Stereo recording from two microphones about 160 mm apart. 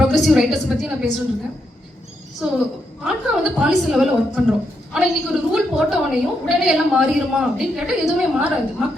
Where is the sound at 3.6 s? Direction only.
5° right (ahead or behind).